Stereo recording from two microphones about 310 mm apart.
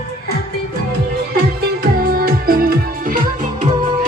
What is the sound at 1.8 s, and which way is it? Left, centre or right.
Music, right.